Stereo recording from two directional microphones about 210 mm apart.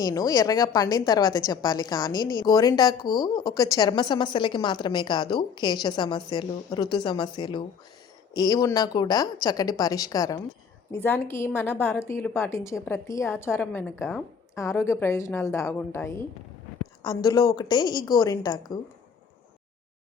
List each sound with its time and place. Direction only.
0.0 s a woman's voice: 15° left (ahead or behind)
17.5 s a woman's voice: 20° left (ahead or behind)